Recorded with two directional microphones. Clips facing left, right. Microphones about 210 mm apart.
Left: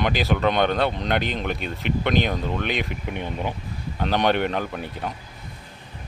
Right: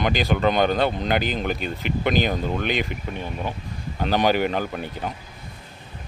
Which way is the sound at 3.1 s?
15° left (ahead or behind).